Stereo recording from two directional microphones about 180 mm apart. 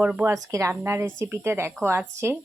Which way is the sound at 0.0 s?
5° right (ahead or behind).